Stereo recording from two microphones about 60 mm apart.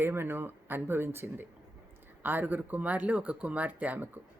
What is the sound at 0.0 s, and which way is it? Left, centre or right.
Speech, right.